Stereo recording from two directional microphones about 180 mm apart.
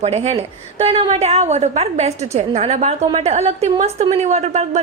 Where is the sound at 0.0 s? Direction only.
35° right (ahead or behind).